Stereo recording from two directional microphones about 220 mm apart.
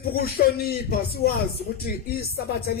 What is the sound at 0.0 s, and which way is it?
Speech, 45° left (ahead or behind).